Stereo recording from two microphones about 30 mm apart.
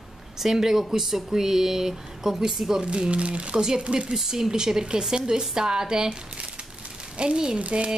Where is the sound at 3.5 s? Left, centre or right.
Right.